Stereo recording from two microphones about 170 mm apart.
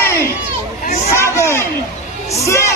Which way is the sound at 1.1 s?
15° left (ahead or behind).